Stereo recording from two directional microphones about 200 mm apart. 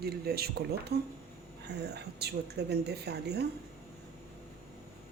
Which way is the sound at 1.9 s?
55° right (ahead or behind).